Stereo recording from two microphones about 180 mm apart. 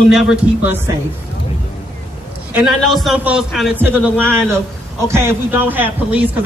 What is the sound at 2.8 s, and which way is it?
Speech, centre (ahead or behind).